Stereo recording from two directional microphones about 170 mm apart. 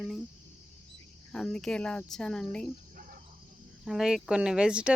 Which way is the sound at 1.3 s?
5° left (ahead or behind).